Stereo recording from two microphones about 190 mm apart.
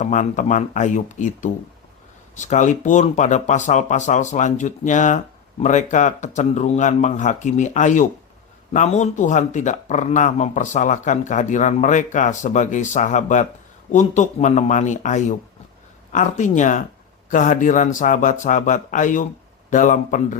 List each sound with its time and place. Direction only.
0.0 s speech: 40° left (ahead or behind)